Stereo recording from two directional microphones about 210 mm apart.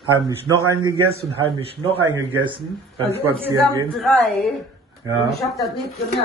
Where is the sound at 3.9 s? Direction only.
Centre (ahead or behind).